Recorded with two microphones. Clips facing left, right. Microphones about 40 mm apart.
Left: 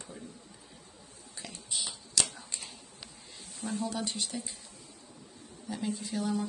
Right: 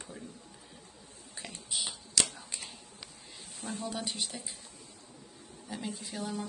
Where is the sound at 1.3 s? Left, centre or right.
Right.